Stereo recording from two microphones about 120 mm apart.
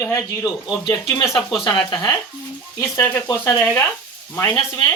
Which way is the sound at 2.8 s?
20° left (ahead or behind).